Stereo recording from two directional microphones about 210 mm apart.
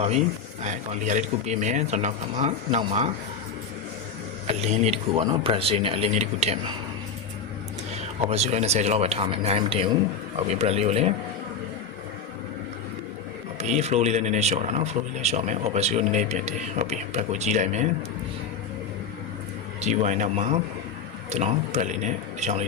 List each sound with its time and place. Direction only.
0.6 s speech: 35° right (ahead or behind)
4.4 s speech: 30° right (ahead or behind)
8.3 s speech: 30° right (ahead or behind)
13.6 s speech: 30° right (ahead or behind)
19.8 s speech: 35° right (ahead or behind)